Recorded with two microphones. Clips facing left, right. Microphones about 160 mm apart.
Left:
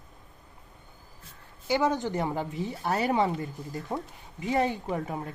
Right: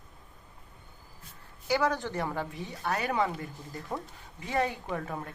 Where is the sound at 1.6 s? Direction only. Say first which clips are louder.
Left 2 dB; 20° left (ahead or behind).